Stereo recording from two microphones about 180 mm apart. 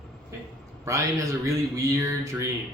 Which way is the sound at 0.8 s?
15° right (ahead or behind).